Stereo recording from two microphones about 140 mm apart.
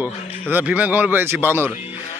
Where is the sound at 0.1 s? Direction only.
55° left (ahead or behind).